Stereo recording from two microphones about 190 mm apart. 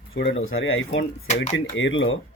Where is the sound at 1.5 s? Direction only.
75° left (ahead or behind).